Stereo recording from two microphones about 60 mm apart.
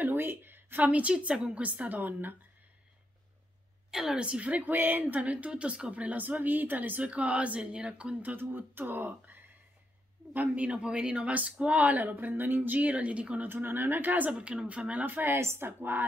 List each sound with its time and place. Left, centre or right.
0.0 s a woman's voice: right
3.9 s a woman's voice: centre
13.5 s speech: right
14.3 s a woman's voice: centre; by 15.4 s right
15.4 s a woman's voice: right
15.8 s speech: right